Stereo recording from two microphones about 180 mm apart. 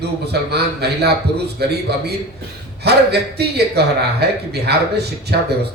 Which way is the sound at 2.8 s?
65° right (ahead or behind).